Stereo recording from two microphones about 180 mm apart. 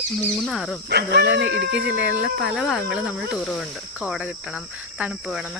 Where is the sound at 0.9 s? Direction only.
65° right (ahead or behind).